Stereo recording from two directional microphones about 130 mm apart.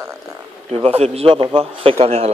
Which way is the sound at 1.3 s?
40° right (ahead or behind).